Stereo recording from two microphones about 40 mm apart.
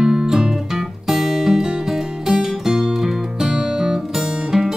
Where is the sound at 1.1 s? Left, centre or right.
Centre.